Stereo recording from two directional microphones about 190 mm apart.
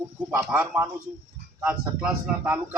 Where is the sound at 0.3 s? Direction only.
10° right (ahead or behind).